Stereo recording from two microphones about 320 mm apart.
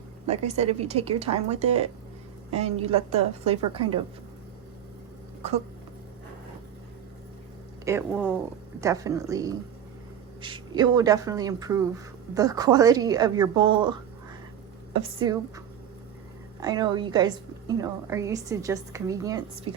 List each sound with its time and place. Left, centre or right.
0.3 s speech: centre
5.4 s speech: centre
7.9 s a woman's voice: centre